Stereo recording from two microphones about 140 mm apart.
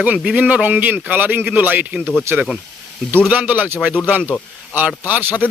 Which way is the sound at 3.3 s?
10° right (ahead or behind).